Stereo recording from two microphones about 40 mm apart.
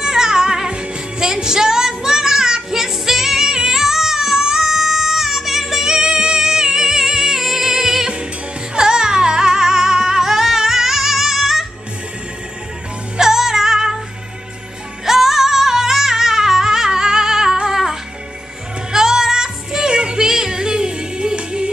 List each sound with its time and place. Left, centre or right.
0.0 s music: centre
13.2 s music: centre
15.0 s music: centre